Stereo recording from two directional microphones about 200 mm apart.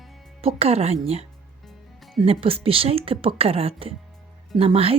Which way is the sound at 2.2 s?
30° right (ahead or behind).